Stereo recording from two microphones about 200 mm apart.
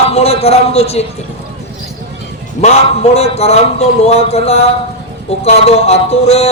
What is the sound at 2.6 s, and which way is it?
A man's voice, 30° left (ahead or behind).